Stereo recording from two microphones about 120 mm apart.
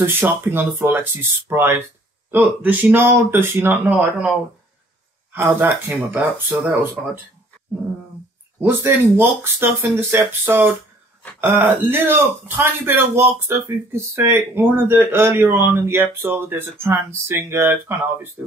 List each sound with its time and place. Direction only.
0.0 s speech: 20° right (ahead or behind)
8.5 s speech: 20° right (ahead or behind)